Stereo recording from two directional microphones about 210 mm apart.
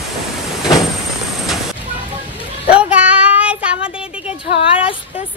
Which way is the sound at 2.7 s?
5° right (ahead or behind).